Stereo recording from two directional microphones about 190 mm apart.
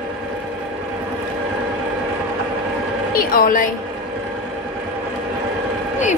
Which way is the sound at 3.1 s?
50° left (ahead or behind).